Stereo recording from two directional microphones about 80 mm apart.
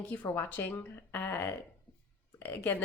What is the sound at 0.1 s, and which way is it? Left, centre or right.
A woman's voice, centre.